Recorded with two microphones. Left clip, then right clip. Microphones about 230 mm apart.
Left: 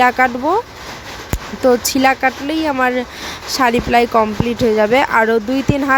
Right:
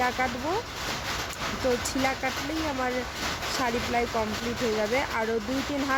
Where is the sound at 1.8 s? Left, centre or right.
Left.